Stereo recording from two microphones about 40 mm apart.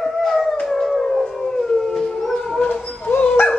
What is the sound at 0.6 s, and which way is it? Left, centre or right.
Howl, centre.